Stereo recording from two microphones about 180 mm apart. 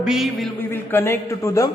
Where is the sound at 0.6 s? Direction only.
10° left (ahead or behind).